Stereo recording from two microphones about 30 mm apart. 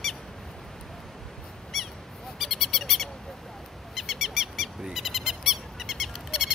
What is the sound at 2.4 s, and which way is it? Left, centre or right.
Owl, centre.